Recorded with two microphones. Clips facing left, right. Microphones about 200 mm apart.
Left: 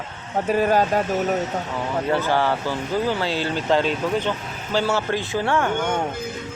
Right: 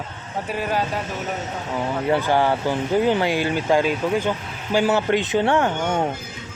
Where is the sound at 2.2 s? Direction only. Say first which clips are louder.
Right 2 dB; 15° right (ahead or behind).